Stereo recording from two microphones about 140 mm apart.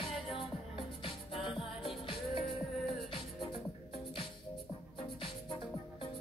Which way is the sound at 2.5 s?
Centre (ahead or behind).